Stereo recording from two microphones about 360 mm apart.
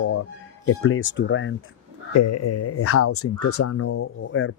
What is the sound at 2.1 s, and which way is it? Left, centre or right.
Speech, left.